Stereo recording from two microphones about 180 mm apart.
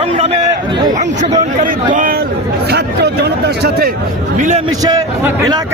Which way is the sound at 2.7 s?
65° right (ahead or behind).